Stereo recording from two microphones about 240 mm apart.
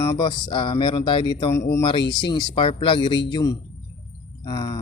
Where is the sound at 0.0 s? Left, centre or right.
Centre.